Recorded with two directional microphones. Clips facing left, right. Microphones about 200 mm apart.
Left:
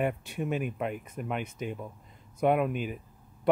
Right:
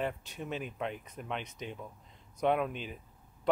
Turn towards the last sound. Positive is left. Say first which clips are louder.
# left 4 dB
turn(degrees=10)  # may be behind; listen again after turning